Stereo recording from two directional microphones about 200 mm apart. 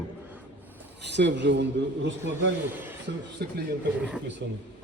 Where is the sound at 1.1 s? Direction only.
60° right (ahead or behind).